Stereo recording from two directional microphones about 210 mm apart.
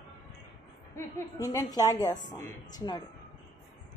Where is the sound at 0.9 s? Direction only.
15° left (ahead or behind).